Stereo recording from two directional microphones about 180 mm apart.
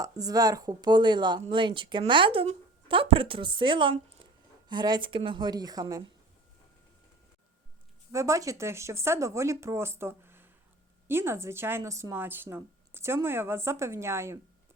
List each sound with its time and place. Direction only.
0.0 s a woman's voice: 20° right (ahead or behind)
8.1 s speech: 15° right (ahead or behind)